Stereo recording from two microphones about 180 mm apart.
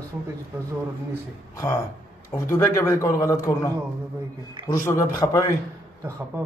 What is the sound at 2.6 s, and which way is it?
A man's voice, 15° left (ahead or behind).